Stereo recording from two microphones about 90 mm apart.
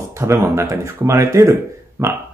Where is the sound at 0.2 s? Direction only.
30° right (ahead or behind).